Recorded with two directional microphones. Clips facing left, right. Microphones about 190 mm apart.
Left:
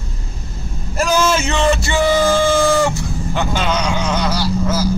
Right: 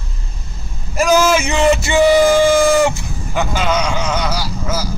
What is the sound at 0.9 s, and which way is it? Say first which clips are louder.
Speech: right 3 dB; 10° right (ahead or behind).